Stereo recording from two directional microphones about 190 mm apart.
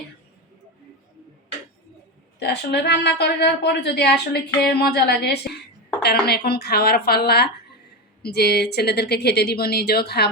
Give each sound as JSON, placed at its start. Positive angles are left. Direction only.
{"t": 2.4, "sound": "a woman's voice", "side_deg": 60}